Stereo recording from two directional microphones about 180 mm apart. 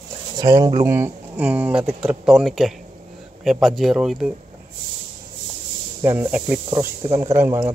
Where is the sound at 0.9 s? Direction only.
10° right (ahead or behind).